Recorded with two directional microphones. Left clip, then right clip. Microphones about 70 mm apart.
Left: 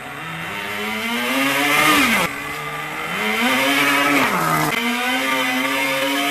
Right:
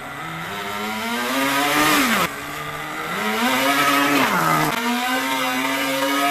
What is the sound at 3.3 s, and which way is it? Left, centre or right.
Vehicle, centre.